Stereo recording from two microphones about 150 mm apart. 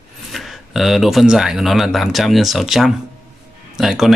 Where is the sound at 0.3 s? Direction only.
Centre (ahead or behind).